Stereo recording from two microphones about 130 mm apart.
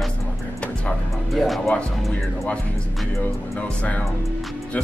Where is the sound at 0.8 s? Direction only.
Centre (ahead or behind).